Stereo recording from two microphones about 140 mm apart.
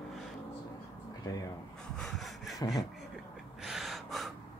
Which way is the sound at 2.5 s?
25° left (ahead or behind).